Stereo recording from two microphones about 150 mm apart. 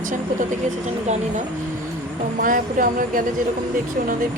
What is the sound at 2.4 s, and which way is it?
Speech, 65° right (ahead or behind).